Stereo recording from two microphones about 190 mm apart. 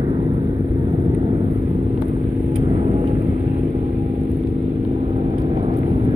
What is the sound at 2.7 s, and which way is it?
Vehicle, 30° right (ahead or behind).